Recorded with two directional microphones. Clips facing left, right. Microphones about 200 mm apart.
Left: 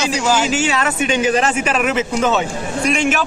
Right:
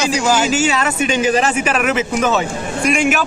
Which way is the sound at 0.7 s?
Centre (ahead or behind).